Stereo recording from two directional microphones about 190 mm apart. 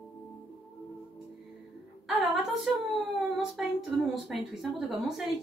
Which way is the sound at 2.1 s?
Centre (ahead or behind).